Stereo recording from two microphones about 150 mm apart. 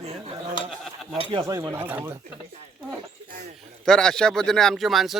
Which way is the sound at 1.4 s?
20° right (ahead or behind).